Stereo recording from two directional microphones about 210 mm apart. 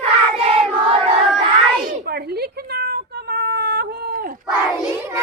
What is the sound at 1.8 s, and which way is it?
Cat, 50° right (ahead or behind).